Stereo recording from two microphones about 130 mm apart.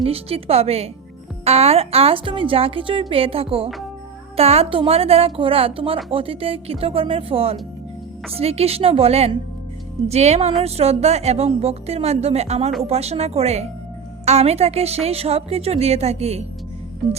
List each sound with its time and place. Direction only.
0.0 s a woman's voice: 50° right (ahead or behind)